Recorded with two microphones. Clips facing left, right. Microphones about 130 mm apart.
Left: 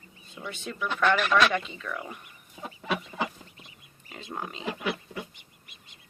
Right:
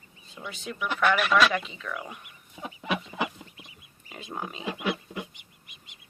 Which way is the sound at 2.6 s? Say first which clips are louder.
Right 1 dB; 15° right (ahead or behind).